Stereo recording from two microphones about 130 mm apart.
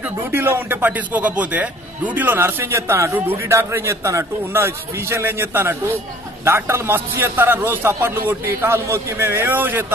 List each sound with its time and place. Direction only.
0.0 s a man's voice: 15° right (ahead or behind)